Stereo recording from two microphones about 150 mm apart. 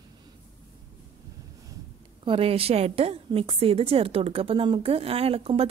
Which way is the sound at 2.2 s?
40° right (ahead or behind).